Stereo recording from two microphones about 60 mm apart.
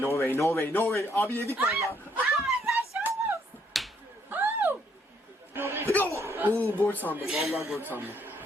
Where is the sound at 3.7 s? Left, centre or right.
Centre.